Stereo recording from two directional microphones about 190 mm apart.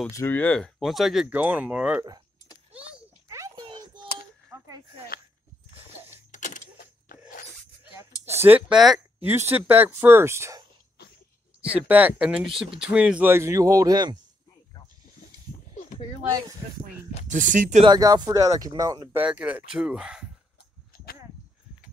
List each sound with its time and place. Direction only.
0.1 s speech: 15° left (ahead or behind); by 2.0 s 5° right (ahead or behind)
3.3 s a sound: 15° right (ahead or behind)
6.3 s a sound: 40° left (ahead or behind)
8.4 s speech: 10° right (ahead or behind)
11.7 s speech: 10° right (ahead or behind)
17.3 s speech: 45° right (ahead or behind)
17.8 s speech: 20° right (ahead or behind)
19.2 s speech: 5° right (ahead or behind)